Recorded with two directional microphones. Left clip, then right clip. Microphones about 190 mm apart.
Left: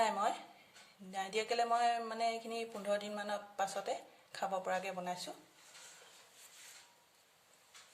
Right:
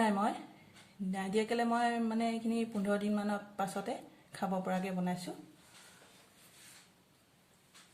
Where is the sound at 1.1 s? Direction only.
10° left (ahead or behind).